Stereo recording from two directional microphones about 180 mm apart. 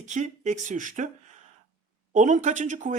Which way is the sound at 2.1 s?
45° right (ahead or behind).